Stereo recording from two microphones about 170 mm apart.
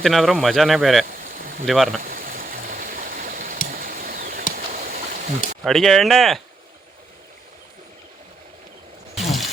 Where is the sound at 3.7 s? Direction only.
55° right (ahead or behind).